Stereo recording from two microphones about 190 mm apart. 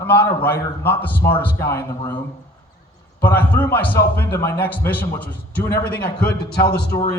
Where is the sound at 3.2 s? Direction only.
10° left (ahead or behind).